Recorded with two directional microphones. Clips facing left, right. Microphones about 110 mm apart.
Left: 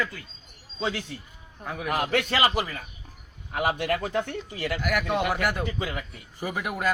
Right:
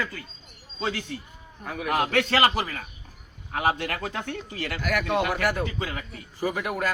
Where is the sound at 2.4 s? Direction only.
50° right (ahead or behind).